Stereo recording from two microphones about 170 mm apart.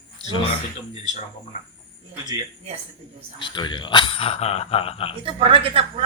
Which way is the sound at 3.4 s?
25° left (ahead or behind).